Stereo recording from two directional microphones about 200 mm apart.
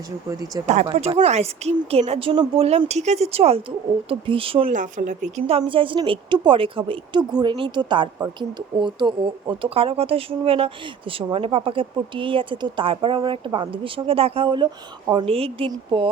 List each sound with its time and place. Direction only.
0.3 s speech: 20° right (ahead or behind)
0.9 s speech: 30° right (ahead or behind)
4.7 s speech: 40° right (ahead or behind)